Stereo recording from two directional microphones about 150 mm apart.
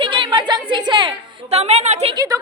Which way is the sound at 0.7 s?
30° right (ahead or behind).